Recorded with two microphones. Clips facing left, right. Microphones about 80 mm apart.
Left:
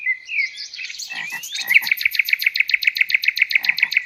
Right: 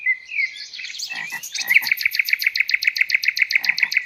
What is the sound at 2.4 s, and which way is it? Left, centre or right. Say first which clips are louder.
Bird: left 1 dB; centre.